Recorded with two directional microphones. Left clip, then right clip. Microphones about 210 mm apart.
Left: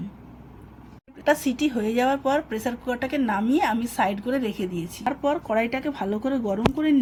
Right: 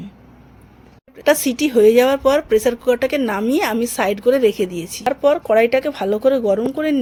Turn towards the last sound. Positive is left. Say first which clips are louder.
# right 6 dB
turn(degrees=-50)  # may be behind; listen again after turning